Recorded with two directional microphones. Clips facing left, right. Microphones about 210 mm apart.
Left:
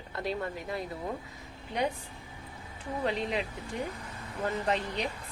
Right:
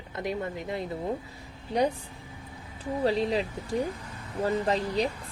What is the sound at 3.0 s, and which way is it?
Speech, 35° right (ahead or behind).